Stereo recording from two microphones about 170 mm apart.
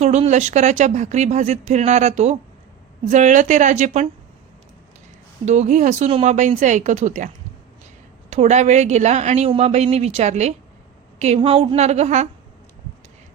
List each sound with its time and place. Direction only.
0.0 s speech: 40° right (ahead or behind)
5.5 s speech: 45° right (ahead or behind)
8.3 s a woman's voice: 40° right (ahead or behind)